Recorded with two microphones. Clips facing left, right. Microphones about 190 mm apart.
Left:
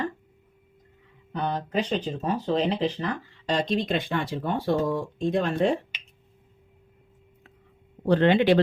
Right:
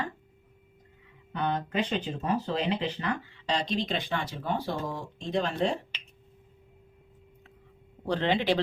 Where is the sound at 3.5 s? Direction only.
50° left (ahead or behind).